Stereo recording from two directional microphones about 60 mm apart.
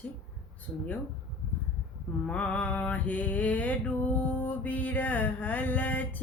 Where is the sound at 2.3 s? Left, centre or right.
Left.